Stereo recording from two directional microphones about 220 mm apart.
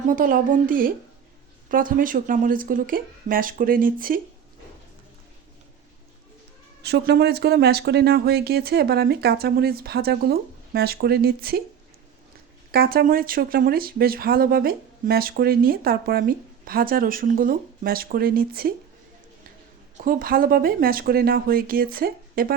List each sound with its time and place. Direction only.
0.1 s speech: 40° right (ahead or behind)
6.8 s speech: 50° right (ahead or behind)
12.7 s speech: 45° right (ahead or behind)
20.1 s speech: 40° right (ahead or behind)